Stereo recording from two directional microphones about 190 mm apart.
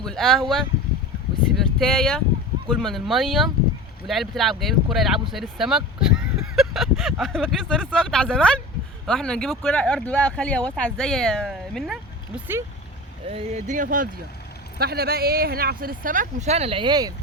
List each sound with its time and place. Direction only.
0.0 s speech: centre (ahead or behind)
13.2 s speech: 30° right (ahead or behind)
14.8 s speech: 55° right (ahead or behind); by 17.2 s 20° right (ahead or behind)